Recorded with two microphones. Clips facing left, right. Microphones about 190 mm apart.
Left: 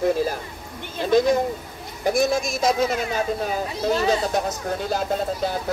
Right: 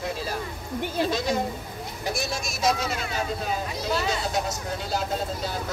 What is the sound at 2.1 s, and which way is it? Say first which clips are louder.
Speech: left 10 dB; 50° left (ahead or behind).